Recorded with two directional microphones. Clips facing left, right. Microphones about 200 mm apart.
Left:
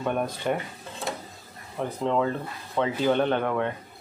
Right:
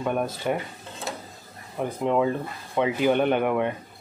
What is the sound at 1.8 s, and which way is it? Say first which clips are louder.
Speech: right 2 dB; 10° right (ahead or behind).